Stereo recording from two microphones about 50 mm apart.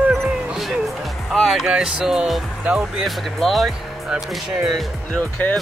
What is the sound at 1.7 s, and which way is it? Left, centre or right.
Music, centre.